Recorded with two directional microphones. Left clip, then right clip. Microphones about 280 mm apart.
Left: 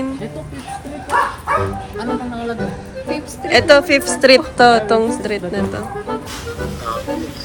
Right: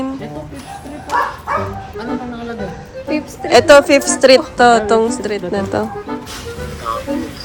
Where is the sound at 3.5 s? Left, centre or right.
Centre.